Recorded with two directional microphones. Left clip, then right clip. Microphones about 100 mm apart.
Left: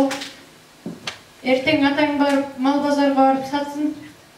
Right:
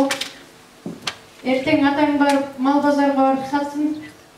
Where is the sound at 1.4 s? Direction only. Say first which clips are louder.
Even; 20° left (ahead or behind).